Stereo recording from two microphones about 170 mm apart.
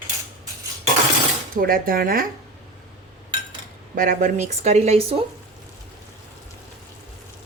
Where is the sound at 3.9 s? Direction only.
55° right (ahead or behind); by 5.3 s 35° right (ahead or behind).